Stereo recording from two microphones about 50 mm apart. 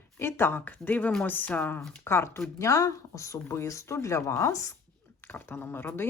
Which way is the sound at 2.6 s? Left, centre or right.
Left.